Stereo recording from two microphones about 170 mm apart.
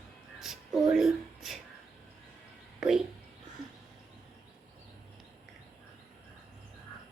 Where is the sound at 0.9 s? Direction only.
Centre (ahead or behind).